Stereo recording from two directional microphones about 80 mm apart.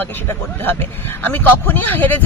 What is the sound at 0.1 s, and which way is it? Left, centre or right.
A man's voice, left.